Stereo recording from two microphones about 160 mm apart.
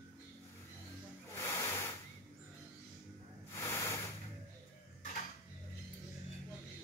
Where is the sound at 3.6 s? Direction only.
20° left (ahead or behind).